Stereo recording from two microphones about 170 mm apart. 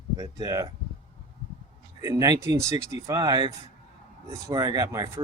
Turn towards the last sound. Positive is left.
turn(degrees=-20)  # may be behind; listen again after turning